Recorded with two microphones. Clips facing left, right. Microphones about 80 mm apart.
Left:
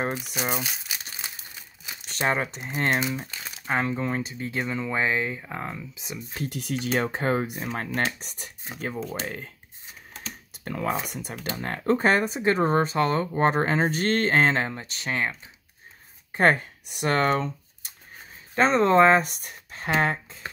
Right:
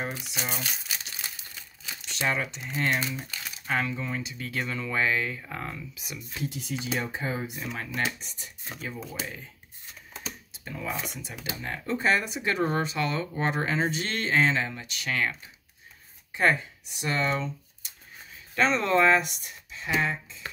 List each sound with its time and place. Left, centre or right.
0.2 s speech: centre
1.2 s crumpling: left
2.0 s speech: left
3.0 s speech: left
6.3 s speech: left
10.5 s speech: left
16.3 s speech: left
18.5 s speech: left